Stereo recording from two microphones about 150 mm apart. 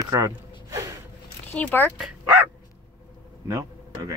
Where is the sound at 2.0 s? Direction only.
10° right (ahead or behind).